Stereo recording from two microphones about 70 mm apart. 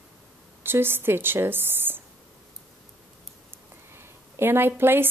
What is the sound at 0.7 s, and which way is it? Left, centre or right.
Speech, right.